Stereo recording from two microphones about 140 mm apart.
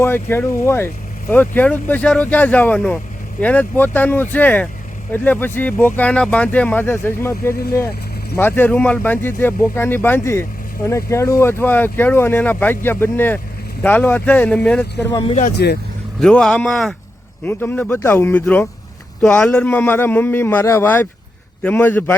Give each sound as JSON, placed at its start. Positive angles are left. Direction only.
{"t": 0.0, "sound": "speech", "side_deg": 15}
{"t": 15.4, "sound": "speech", "side_deg": 75}
{"t": 16.2, "sound": "speech", "side_deg": 5}